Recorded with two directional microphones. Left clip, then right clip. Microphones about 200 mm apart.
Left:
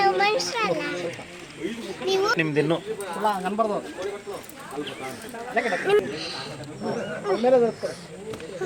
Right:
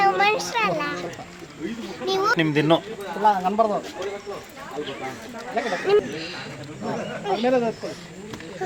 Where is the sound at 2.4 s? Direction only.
50° right (ahead or behind).